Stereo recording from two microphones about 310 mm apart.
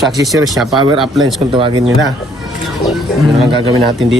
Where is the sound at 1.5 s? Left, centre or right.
Centre.